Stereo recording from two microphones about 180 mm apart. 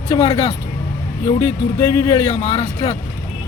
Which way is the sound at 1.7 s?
20° left (ahead or behind).